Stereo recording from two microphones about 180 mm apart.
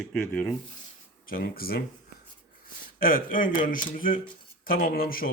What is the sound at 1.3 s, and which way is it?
Speech, 55° left (ahead or behind).